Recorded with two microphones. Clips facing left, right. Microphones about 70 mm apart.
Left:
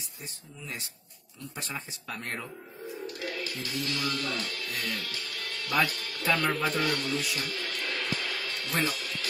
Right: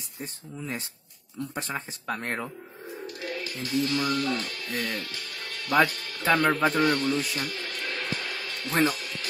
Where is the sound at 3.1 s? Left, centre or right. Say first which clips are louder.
Right 4 dB; right.